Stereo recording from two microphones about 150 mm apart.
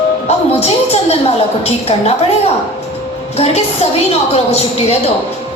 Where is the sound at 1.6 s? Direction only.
45° left (ahead or behind).